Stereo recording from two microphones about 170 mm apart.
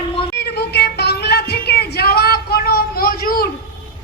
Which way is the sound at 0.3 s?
80° left.